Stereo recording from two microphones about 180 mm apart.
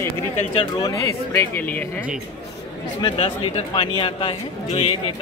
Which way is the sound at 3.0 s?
30° left (ahead or behind).